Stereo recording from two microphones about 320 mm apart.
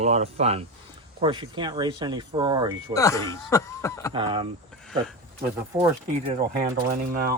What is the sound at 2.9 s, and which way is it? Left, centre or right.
Speech, centre.